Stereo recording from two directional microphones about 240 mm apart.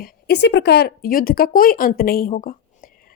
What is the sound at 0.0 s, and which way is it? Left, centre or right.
Speech, left.